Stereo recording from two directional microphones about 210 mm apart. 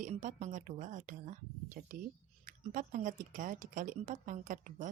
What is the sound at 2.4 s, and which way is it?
Speech, 40° right (ahead or behind).